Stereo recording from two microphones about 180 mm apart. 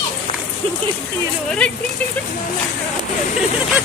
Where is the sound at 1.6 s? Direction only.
5° left (ahead or behind).